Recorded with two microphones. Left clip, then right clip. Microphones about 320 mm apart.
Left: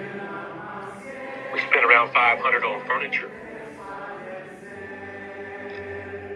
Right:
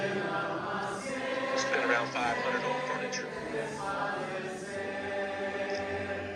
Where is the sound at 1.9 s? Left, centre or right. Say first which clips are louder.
Left 13 dB; left.